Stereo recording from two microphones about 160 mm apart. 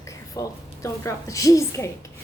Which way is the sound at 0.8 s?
20° left (ahead or behind).